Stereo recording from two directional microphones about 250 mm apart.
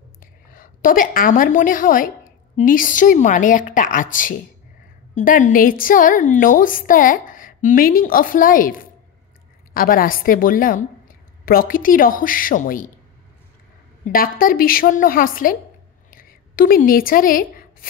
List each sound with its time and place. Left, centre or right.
0.2 s a woman's voice: left
14.0 s a woman's voice: left
16.1 s writing: left